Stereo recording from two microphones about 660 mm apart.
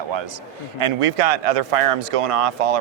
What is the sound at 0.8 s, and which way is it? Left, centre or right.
Speech, right.